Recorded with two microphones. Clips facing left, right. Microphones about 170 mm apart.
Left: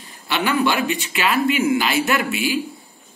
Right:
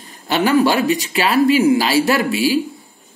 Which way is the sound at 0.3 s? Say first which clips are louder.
Right 5 dB; 40° right (ahead or behind).